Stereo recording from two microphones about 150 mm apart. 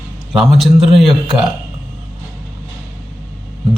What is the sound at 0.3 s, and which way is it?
A man's voice, centre (ahead or behind).